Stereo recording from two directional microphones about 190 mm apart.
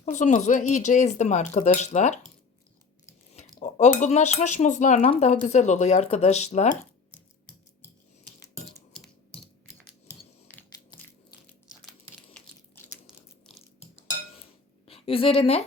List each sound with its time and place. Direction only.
0.0 s speech: 40° left (ahead or behind)
3.3 s speech: 40° left (ahead or behind)
8.9 s a sound: 5° left (ahead or behind)
12.3 s crumpling: 10° left (ahead or behind)
14.8 s a woman's voice: 30° left (ahead or behind)